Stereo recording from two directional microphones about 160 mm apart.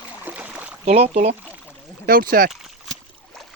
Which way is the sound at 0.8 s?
40° right (ahead or behind).